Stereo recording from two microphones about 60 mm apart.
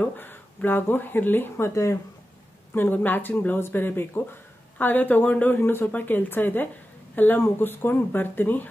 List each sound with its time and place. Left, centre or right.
0.2 s speech: left
2.7 s speech: left